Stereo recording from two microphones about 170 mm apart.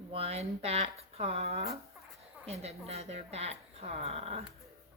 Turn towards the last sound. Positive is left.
turn(degrees=-35)  # may be behind; listen again after turning